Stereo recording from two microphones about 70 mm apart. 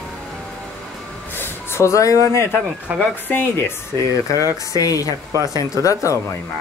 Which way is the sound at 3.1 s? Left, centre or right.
Left.